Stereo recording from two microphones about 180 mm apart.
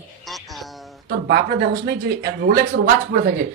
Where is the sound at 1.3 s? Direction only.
65° right (ahead or behind).